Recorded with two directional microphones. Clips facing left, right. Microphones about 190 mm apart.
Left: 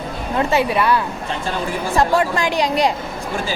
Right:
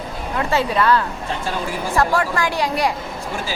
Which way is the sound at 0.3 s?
15° left (ahead or behind).